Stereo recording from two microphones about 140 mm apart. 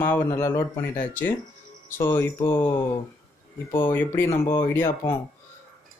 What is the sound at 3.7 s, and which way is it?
Speech, 15° left (ahead or behind).